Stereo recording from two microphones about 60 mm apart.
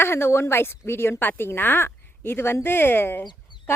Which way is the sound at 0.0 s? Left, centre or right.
Left.